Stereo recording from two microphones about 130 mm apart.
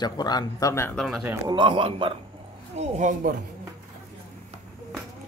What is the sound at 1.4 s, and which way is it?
Speech, 40° right (ahead or behind).